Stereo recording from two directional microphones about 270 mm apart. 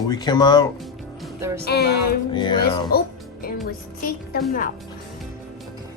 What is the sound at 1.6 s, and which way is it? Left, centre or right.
Speech, left.